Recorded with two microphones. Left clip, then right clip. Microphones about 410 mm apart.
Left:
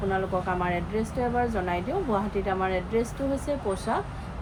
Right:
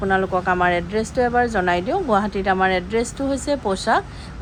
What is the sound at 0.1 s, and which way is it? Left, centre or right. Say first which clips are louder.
A woman's voice: right 10 dB; right.